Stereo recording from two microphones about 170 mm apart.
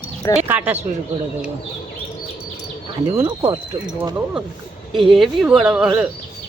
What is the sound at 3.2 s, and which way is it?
Speech, 25° right (ahead or behind).